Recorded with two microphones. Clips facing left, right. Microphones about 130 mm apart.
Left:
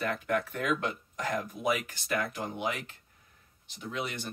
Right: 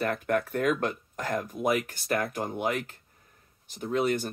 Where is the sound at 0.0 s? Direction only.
45° right (ahead or behind).